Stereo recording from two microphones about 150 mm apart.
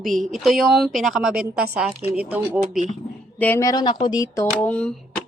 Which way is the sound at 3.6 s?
30° left (ahead or behind).